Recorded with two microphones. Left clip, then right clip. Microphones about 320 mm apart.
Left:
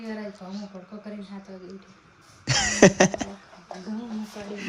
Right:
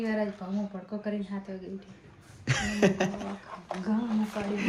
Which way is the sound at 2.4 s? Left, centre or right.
Centre.